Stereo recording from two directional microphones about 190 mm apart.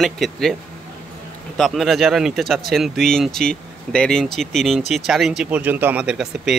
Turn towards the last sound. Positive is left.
turn(degrees=-5)  # may be behind; listen again after turning